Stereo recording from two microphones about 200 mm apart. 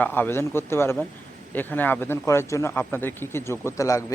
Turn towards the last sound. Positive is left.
turn(degrees=15)  # may be behind; listen again after turning